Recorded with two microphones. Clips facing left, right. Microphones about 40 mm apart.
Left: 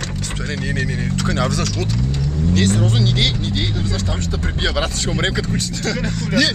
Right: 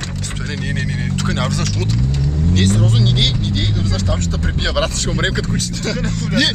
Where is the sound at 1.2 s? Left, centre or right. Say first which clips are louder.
Left 1 dB; centre.